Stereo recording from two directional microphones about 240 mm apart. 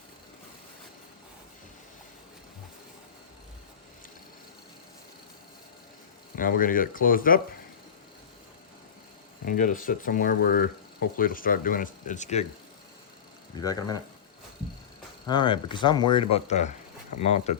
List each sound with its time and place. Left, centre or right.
6.3 s speech: left
9.4 s speech: left
13.6 s speech: centre
15.3 s speech: centre